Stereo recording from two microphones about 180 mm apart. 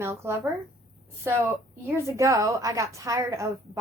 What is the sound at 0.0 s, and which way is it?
Speech, 15° right (ahead or behind).